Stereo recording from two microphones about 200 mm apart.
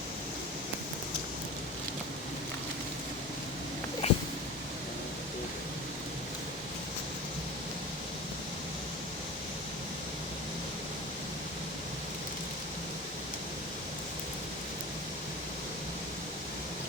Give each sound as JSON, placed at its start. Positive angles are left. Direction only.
{"t": 4.0, "sound": "cat", "side_deg": 30}